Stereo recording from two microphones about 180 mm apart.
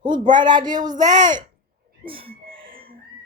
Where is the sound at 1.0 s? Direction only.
45° right (ahead or behind).